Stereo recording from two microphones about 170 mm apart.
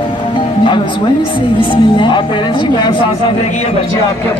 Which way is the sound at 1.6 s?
25° left (ahead or behind).